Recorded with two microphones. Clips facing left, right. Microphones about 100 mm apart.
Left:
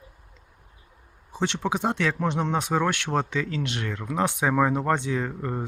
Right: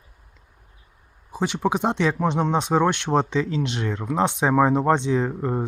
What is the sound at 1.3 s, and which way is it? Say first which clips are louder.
Speech: right 3 dB; 10° right (ahead or behind).